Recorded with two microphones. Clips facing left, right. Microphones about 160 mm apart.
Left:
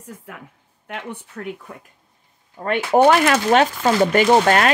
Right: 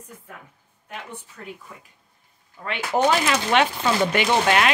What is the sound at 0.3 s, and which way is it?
Speech, 85° left.